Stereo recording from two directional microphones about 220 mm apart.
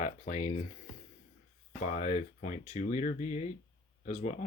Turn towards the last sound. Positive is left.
turn(degrees=35)  # may be behind; listen again after turning